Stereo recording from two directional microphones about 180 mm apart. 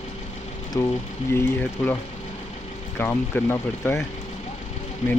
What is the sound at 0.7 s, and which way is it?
Speech, 15° left (ahead or behind).